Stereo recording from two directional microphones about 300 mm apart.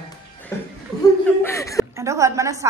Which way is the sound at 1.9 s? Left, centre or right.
Centre.